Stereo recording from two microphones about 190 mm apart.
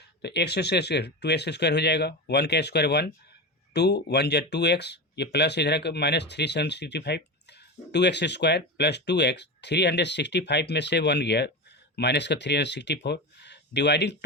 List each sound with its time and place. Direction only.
0.2 s speech: 60° left (ahead or behind)